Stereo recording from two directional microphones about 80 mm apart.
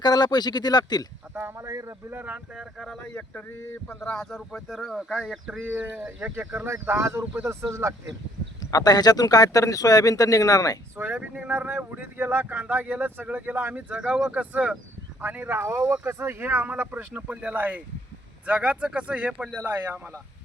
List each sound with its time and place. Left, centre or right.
0.0 s speech: left
1.3 s speech: right
1.6 s speech: right
2.1 s speech: centre
2.6 s speech: centre
3.0 s speech: centre
4.2 s speech: centre
5.6 s speech: right
6.6 s speech: right
8.7 s speech: left
10.9 s speech: right
13.9 s speech: centre